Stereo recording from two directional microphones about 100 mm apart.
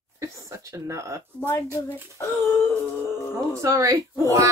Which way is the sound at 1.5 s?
30° left (ahead or behind).